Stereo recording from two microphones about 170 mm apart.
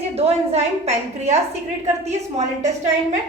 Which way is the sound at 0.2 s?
35° right (ahead or behind).